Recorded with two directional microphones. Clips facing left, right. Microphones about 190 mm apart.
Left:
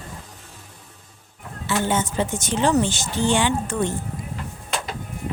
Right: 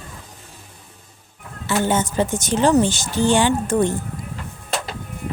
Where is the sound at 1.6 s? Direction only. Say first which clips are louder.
Right 3 dB; 45° right (ahead or behind).